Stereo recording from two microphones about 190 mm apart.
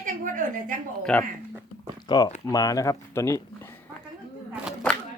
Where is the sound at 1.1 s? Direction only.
5° left (ahead or behind).